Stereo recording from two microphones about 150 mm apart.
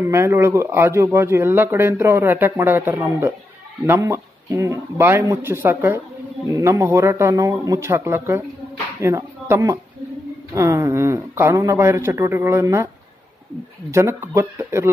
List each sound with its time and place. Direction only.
0.0 s speech: 15° right (ahead or behind)